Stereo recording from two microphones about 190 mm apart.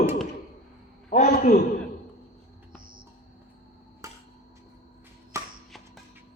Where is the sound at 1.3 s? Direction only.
50° left (ahead or behind).